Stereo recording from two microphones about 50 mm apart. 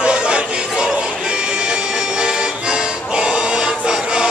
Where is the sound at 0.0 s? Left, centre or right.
Right.